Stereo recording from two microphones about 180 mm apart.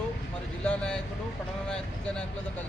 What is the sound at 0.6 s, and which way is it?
Speech, 5° left (ahead or behind).